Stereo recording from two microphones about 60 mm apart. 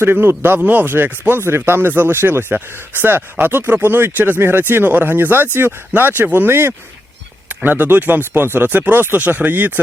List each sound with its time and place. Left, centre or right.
0.0 s speech: right